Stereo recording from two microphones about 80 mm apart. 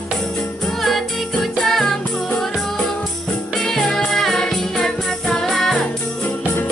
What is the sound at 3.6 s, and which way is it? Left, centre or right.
Music, centre.